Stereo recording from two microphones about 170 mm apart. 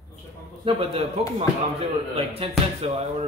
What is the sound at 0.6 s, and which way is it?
Speech, 35° right (ahead or behind).